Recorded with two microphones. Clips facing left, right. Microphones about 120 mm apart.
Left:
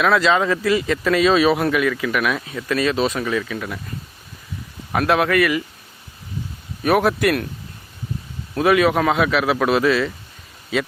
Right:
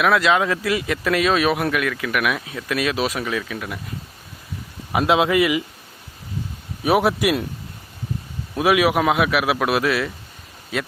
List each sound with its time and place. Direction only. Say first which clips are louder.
0.0 s speech: left 1 dB; 5° right (ahead or behind)
4.9 s a man's voice: even; 15° right (ahead or behind)
6.8 s a man's voice: left 1 dB; 10° right (ahead or behind)
8.5 s a man's voice: left 1 dB; 10° right (ahead or behind)